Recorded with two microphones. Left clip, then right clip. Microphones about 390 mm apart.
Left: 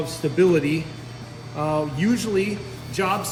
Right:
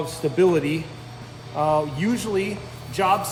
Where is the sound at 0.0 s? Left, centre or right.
Right.